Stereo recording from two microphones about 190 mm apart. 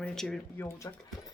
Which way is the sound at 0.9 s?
20° left (ahead or behind).